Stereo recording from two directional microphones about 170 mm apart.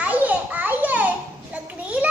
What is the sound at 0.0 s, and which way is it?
Children playing, 10° right (ahead or behind).